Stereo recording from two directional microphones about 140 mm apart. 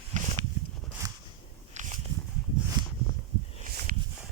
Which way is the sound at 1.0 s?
20° right (ahead or behind).